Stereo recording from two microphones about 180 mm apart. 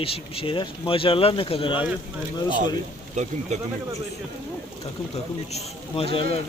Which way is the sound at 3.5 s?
40° right (ahead or behind).